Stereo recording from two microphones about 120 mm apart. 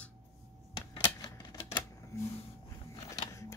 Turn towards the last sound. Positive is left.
turn(degrees=25)  # may be behind; listen again after turning